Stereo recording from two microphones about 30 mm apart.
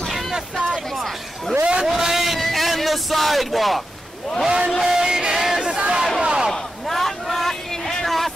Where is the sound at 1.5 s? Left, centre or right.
Right.